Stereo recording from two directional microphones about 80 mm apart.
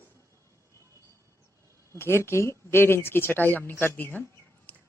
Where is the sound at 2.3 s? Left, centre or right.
Left.